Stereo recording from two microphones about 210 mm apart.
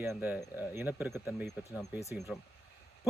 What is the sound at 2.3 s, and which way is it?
Speech, 5° left (ahead or behind).